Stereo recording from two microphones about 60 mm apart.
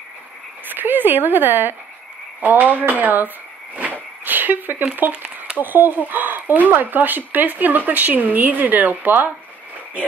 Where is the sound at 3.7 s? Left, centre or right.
Right.